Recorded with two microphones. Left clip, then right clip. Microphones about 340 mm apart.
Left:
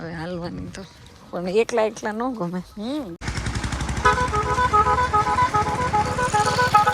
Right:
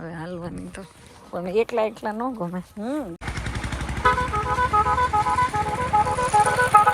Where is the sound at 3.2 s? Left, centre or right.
Centre.